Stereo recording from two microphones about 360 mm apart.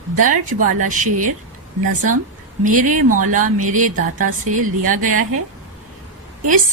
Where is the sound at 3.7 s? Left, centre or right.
Right.